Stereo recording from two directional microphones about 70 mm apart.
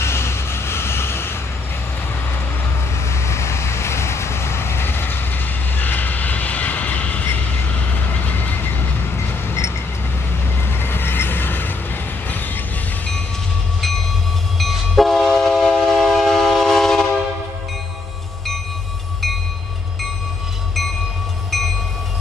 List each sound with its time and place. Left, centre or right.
0.0 s vehicle: left
3.1 s vehicle: left
10.8 s vehicle: left
14.6 s train: centre